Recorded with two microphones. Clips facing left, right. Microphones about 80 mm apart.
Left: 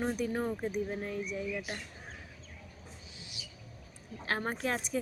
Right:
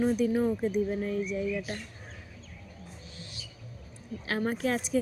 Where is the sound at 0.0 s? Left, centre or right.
Left.